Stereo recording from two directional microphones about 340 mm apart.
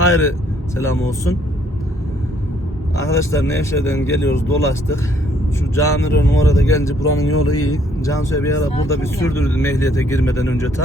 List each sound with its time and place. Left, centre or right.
0.0 s speech: left
0.8 s speech: centre
3.1 s speech: centre
7.3 s speech: left
7.6 s speech: centre